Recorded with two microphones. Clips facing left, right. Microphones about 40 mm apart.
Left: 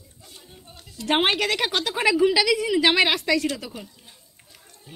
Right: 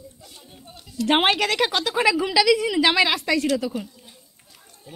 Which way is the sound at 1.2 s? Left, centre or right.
Centre.